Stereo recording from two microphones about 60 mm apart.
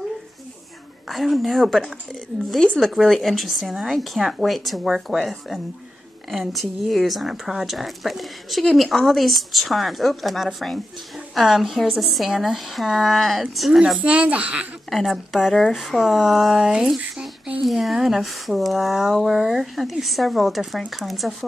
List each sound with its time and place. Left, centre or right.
1.0 s speech: centre
13.9 s speech: right
14.9 s speech: centre